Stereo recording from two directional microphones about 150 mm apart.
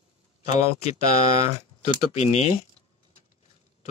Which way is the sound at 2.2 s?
50° left (ahead or behind).